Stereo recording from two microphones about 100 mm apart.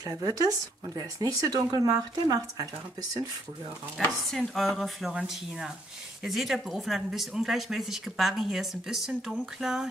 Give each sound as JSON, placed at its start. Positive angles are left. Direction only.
{"t": 0.0, "sound": "speech", "side_deg": -40}
{"t": 4.3, "sound": "speech", "side_deg": 0}